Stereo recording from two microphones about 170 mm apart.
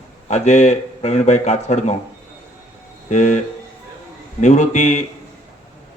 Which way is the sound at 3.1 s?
45° left (ahead or behind).